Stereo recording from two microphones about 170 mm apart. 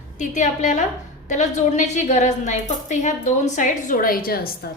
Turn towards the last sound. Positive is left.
turn(degrees=60)  # may be behind; listen again after turning